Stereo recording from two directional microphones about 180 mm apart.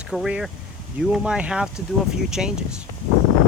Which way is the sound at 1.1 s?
5° right (ahead or behind).